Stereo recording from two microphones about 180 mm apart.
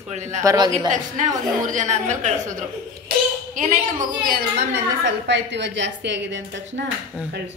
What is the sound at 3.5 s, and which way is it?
Speech, 45° right (ahead or behind).